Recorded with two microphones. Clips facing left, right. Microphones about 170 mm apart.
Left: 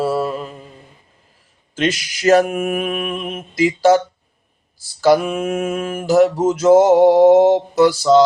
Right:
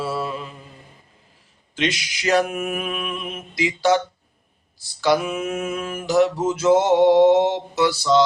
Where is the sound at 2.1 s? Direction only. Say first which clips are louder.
Left 7 dB; 45° left (ahead or behind).